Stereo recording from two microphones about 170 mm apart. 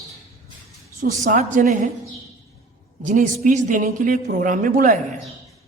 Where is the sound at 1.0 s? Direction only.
45° right (ahead or behind).